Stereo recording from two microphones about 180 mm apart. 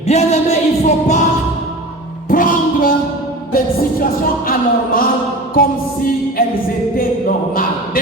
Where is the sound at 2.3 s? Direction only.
50° left (ahead or behind).